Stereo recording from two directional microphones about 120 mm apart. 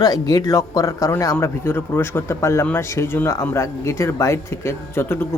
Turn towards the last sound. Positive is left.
turn(degrees=20)  # may be behind; listen again after turning